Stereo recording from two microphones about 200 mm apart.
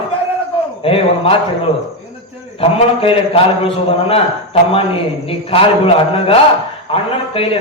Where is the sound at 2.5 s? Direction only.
30° left (ahead or behind).